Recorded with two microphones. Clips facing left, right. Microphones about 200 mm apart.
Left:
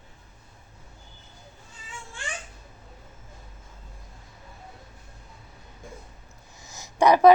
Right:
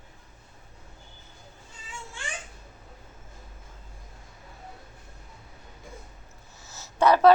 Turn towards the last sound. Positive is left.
turn(degrees=15)  # may be behind; listen again after turning